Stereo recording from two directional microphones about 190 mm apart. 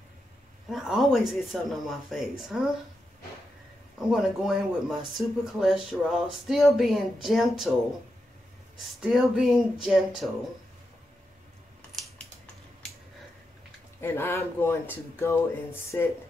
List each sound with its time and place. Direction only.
0.7 s speech: centre (ahead or behind)
4.1 s speech: centre (ahead or behind)
9.0 s speech: centre (ahead or behind)
14.0 s speech: 15° left (ahead or behind)